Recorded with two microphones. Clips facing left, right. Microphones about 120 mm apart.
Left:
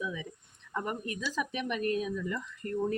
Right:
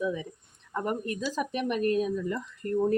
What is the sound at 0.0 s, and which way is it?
Speech, 40° right (ahead or behind).